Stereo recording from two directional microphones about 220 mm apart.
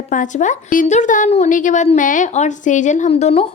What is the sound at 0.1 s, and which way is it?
A woman's voice, 35° left (ahead or behind).